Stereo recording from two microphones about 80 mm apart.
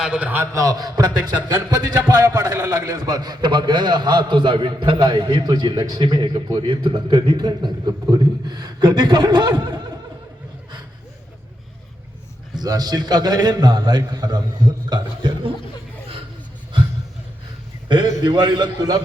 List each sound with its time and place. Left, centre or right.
0.0 s a man's voice: centre
0.5 s a man's voice: right
2.5 s a man's voice: right
12.5 s a man's voice: right
14.8 s a man's voice: right
17.8 s a man's voice: right